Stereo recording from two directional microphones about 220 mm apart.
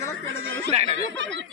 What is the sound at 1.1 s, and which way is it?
Speech, 55° right (ahead or behind).